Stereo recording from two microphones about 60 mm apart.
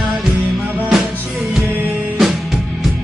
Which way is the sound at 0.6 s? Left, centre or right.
Right.